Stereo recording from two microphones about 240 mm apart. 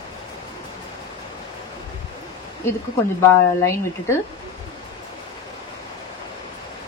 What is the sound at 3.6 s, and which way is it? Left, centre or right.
Speech, centre.